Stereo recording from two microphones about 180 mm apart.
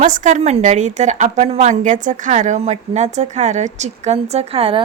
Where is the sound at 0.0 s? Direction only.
45° right (ahead or behind).